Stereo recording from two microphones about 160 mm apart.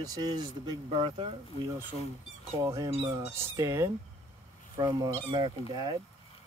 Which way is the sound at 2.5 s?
20° right (ahead or behind).